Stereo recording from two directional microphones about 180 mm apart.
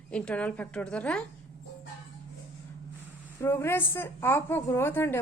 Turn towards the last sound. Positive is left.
turn(degrees=15)  # may be behind; listen again after turning